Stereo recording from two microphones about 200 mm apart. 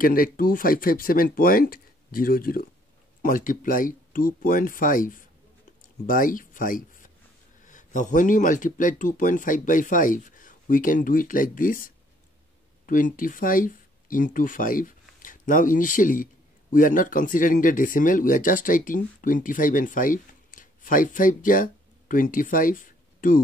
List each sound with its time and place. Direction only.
0.0 s speech: 45° left (ahead or behind)